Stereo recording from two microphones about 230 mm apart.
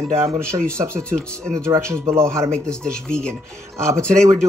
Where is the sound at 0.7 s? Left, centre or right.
Centre.